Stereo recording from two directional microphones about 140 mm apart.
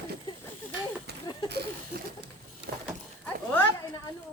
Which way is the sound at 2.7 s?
90° right.